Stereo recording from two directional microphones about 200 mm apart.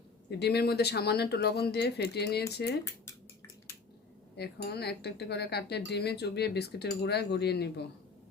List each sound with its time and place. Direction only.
0.3 s speech: 55° left (ahead or behind)
4.4 s speech: 55° left (ahead or behind)